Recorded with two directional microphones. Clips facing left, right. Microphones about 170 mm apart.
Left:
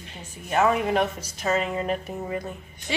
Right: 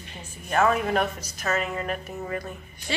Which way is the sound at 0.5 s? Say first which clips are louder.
Left 1 dB; 15° left (ahead or behind).